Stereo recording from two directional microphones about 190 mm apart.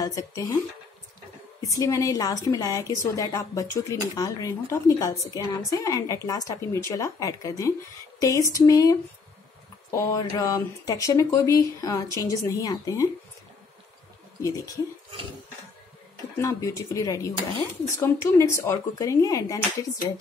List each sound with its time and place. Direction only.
0.0 s speech: 15° left (ahead or behind)
1.6 s speech: 20° left (ahead or behind)
8.2 s a sound: 15° left (ahead or behind)
8.5 s speech: 20° left (ahead or behind)
16.3 s speech: 15° left (ahead or behind)